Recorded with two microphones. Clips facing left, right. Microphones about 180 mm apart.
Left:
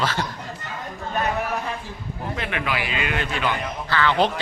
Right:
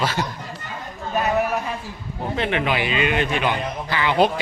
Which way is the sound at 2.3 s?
25° right (ahead or behind).